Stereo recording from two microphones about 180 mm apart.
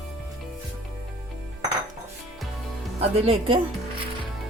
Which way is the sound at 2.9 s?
35° right (ahead or behind).